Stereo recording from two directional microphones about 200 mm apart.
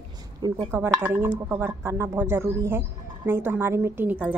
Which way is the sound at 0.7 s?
10° right (ahead or behind).